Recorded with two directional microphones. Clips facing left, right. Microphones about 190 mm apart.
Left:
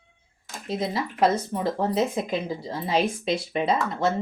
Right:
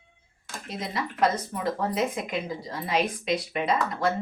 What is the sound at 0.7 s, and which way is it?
Speech, 30° left (ahead or behind).